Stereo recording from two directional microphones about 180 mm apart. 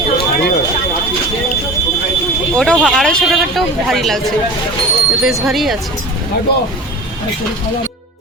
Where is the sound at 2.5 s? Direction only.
5° left (ahead or behind).